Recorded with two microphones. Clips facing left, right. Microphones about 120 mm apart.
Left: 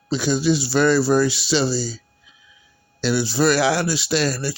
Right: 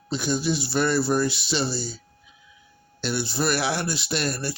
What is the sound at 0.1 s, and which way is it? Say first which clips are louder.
Speech: left 6 dB; 90° left.